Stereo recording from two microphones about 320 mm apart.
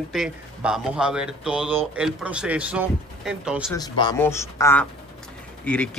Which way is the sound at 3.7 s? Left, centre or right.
Centre.